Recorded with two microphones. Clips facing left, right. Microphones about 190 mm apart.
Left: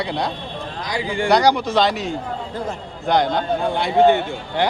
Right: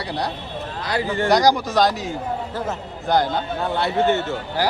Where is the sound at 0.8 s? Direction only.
15° left (ahead or behind).